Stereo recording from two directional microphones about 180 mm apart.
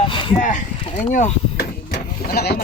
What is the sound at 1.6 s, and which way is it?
Vehicle, 60° left (ahead or behind).